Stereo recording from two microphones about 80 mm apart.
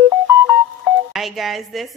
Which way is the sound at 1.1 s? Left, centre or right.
Centre.